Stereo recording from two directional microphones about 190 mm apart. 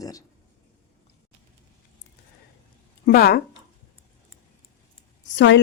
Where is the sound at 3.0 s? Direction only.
55° left (ahead or behind).